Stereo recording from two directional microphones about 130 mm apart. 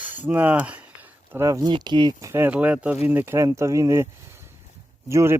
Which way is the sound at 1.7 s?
35° right (ahead or behind).